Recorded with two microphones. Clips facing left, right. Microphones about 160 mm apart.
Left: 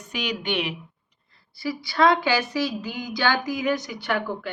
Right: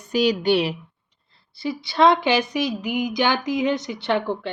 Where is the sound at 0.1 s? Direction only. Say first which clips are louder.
Right 9 dB; 35° right (ahead or behind).